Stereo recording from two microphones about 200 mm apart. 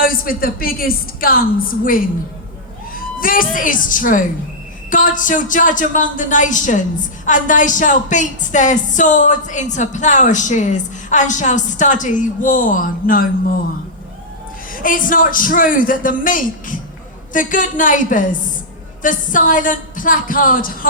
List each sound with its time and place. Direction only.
0.0 s a man's voice: 45° left (ahead or behind)
14.7 s a man's voice: 45° left (ahead or behind)